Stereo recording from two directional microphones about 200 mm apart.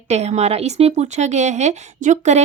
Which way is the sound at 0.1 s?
35° right (ahead or behind).